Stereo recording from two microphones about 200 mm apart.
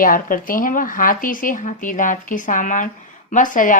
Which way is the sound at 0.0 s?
45° left (ahead or behind).